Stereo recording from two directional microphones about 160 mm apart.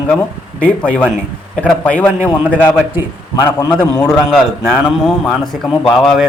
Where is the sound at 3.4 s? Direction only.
20° left (ahead or behind).